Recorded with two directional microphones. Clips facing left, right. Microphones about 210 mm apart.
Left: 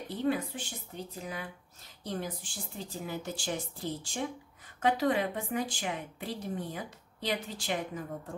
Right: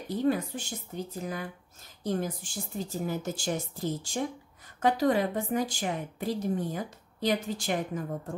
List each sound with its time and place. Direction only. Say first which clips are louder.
0.1 s a woman's voice: right 4 dB; 40° right (ahead or behind)